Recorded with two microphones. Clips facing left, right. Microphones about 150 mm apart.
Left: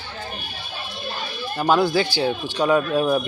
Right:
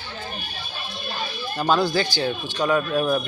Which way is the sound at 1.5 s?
5° left (ahead or behind).